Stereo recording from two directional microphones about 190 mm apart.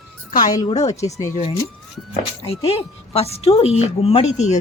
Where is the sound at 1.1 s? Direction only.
15° left (ahead or behind).